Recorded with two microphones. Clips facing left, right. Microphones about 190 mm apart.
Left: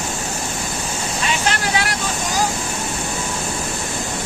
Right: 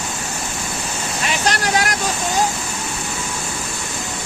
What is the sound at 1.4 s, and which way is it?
Vehicle, 45° right (ahead or behind).